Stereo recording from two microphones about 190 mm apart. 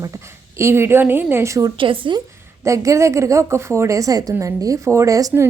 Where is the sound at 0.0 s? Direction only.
15° right (ahead or behind).